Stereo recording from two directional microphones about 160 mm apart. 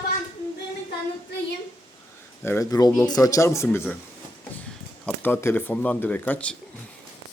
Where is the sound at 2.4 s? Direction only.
15° left (ahead or behind).